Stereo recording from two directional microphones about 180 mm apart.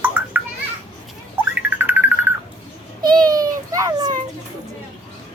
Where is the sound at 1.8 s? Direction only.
10° right (ahead or behind).